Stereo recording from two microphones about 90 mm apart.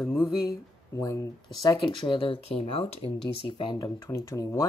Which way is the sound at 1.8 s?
70° left (ahead or behind).